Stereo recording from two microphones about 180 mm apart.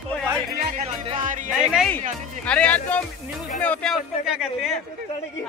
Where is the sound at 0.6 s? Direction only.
45° right (ahead or behind).